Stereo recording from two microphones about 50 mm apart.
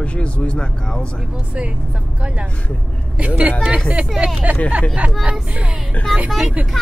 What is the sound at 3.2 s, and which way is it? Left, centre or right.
Speech, right.